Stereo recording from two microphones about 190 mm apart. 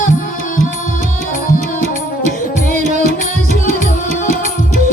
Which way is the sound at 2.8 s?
40° right (ahead or behind).